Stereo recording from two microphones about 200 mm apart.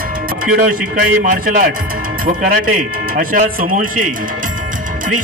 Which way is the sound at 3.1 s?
40° right (ahead or behind).